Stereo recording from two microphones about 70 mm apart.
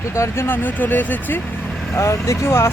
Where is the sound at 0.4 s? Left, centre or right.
Left.